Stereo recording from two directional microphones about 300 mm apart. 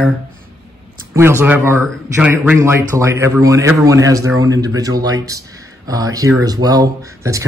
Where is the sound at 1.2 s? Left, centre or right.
Centre.